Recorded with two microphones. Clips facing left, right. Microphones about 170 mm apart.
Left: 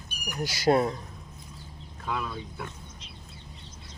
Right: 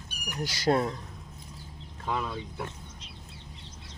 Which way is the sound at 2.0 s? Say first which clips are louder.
Right 1 dB; 25° right (ahead or behind).